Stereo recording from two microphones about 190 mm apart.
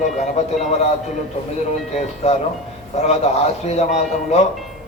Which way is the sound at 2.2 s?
35° left (ahead or behind).